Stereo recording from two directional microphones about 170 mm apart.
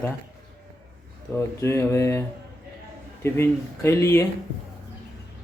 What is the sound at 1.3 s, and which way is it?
Speech, 15° left (ahead or behind).